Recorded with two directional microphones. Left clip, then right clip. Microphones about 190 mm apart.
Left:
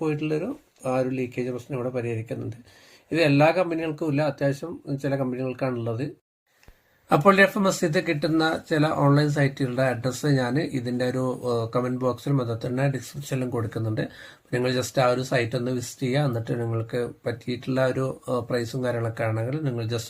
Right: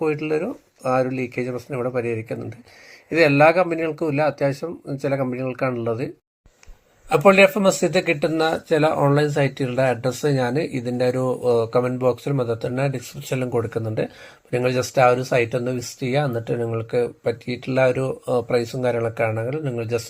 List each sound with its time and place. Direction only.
0.0 s speech: 10° right (ahead or behind)
7.1 s speech: 15° right (ahead or behind)